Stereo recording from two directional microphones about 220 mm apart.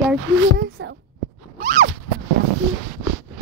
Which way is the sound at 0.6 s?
55° right (ahead or behind).